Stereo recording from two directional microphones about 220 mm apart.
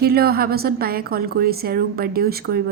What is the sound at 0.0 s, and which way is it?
A woman's voice, 45° right (ahead or behind).